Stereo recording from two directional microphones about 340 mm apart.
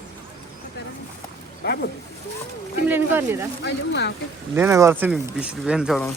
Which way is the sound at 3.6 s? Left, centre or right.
Left.